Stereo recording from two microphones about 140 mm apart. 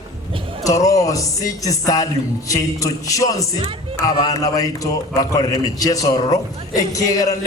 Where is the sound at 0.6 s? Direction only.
25° left (ahead or behind).